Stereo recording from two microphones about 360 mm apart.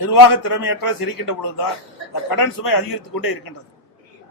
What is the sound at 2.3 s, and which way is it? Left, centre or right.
A man's voice, left.